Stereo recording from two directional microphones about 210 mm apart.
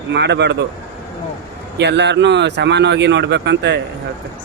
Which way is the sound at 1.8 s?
55° right (ahead or behind).